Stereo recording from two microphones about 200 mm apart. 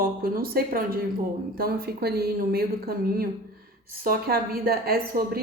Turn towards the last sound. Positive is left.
turn(degrees=-50)  # may be behind; listen again after turning